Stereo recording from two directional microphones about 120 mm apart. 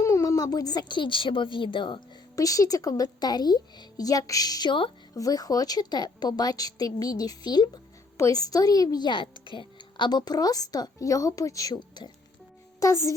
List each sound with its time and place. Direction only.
0.0 s speech: 25° left (ahead or behind); by 2.0 s 45° left (ahead or behind)
2.3 s a woman's voice: 30° left (ahead or behind)
12.8 s speech: 25° left (ahead or behind)